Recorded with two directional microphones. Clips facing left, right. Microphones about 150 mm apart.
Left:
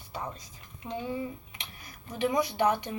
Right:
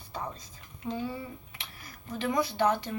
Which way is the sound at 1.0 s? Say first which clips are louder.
Left 2 dB; 20° left (ahead or behind).